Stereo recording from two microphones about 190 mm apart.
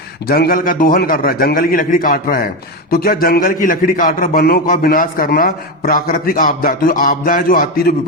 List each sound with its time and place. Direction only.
0.3 s a man's voice: 55° left (ahead or behind)